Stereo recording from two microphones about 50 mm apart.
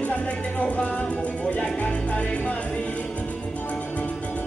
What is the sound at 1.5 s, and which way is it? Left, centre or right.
Music, left.